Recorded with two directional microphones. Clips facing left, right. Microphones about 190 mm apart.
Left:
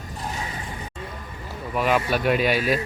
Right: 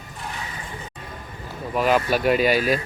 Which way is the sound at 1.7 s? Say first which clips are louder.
Right 2 dB; centre (ahead or behind).